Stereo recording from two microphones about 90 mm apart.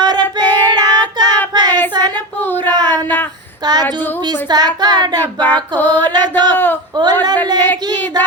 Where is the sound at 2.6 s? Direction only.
50° right (ahead or behind).